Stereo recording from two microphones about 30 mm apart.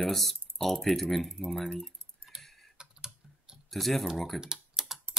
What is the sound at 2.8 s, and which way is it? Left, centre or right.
Typing, right.